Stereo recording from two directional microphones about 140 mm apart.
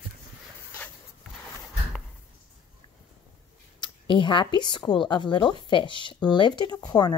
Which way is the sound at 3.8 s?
35° left (ahead or behind).